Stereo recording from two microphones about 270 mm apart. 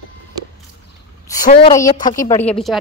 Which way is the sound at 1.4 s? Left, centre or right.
Centre.